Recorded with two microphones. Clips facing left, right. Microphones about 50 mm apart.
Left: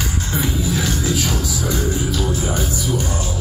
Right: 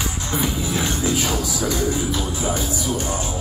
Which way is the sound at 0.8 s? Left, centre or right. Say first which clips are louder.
Left 1 dB; right.